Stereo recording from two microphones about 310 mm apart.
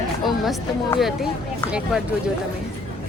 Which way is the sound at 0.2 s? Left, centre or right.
Centre.